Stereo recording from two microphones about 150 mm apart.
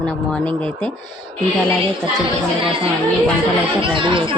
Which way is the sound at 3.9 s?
35° right (ahead or behind).